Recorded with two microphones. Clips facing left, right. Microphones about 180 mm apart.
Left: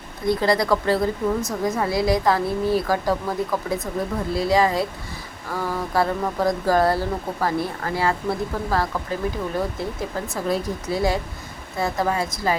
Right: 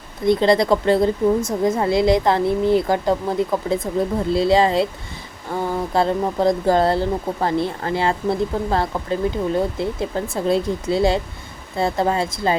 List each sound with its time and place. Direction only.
0.3 s speech: 20° right (ahead or behind)